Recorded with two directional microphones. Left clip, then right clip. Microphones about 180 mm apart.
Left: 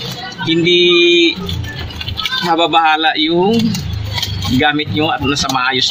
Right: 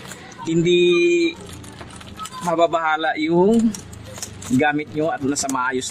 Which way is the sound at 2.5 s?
65° right (ahead or behind).